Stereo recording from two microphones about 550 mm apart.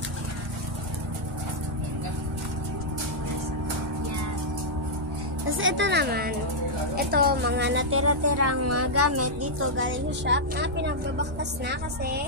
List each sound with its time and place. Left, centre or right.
5.5 s a woman's voice: right